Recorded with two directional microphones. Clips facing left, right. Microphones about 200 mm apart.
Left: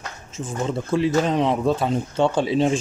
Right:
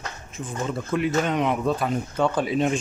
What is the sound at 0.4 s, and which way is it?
Speech, 30° left (ahead or behind).